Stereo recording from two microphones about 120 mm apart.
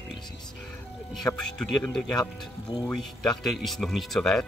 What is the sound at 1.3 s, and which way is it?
Speech, 5° left (ahead or behind).